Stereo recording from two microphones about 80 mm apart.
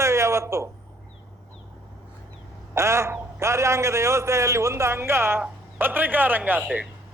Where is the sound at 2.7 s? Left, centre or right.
Right.